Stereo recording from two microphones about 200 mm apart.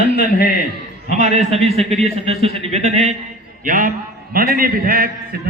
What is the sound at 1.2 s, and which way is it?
A man's voice, 35° right (ahead or behind).